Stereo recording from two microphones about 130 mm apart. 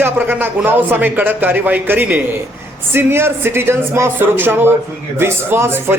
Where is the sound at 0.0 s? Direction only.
15° right (ahead or behind).